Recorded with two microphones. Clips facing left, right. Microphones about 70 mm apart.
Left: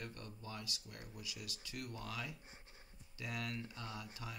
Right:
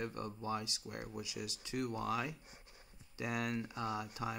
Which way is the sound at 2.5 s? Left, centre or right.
Left.